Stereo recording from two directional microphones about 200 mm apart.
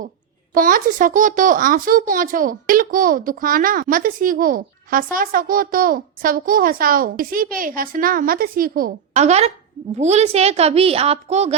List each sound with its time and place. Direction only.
0.5 s a woman's voice: 45° right (ahead or behind)